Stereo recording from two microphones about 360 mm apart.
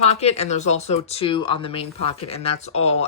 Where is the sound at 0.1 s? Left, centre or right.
Centre.